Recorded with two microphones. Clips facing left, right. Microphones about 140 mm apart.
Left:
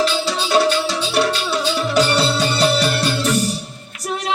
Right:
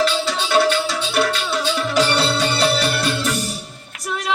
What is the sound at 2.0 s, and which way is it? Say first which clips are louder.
Music: left 1 dB; 40° left (ahead or behind).